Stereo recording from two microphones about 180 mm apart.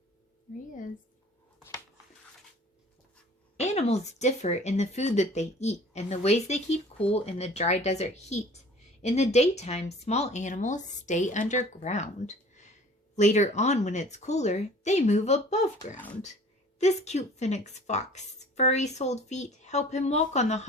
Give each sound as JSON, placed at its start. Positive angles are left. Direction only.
{"t": 3.6, "sound": "speech", "side_deg": 35}